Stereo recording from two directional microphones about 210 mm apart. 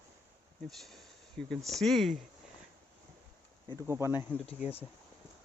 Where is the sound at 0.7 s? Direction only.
Centre (ahead or behind).